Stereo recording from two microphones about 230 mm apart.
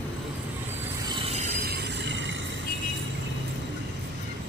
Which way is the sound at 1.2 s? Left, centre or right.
Right.